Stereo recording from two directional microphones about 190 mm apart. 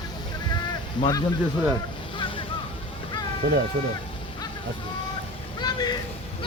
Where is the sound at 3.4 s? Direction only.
60° right (ahead or behind).